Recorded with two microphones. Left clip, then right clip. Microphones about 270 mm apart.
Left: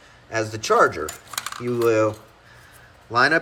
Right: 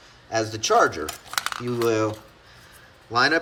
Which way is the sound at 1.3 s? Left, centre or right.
Right.